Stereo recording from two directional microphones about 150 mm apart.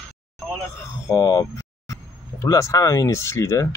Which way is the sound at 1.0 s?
25° left (ahead or behind).